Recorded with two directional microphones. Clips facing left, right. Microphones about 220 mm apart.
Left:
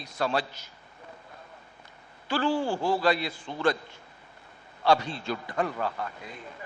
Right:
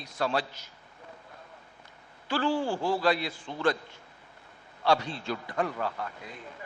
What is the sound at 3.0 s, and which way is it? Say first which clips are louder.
Speech: left 1 dB; 10° left (ahead or behind).